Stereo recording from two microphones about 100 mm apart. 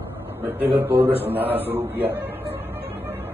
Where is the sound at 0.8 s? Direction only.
20° right (ahead or behind).